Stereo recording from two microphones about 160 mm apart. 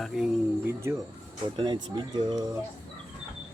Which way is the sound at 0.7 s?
15° right (ahead or behind).